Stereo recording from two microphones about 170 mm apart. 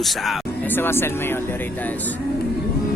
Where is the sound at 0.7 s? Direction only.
15° left (ahead or behind).